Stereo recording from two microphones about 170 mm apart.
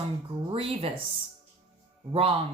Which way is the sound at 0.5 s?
35° right (ahead or behind).